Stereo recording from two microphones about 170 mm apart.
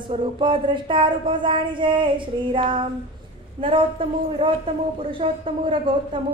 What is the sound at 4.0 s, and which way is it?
A woman's voice, 30° right (ahead or behind).